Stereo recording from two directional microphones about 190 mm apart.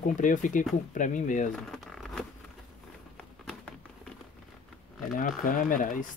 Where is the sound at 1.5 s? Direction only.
Centre (ahead or behind).